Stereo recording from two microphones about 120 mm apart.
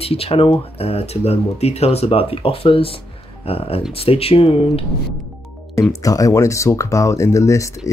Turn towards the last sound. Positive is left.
turn(degrees=25)  # may be behind; listen again after turning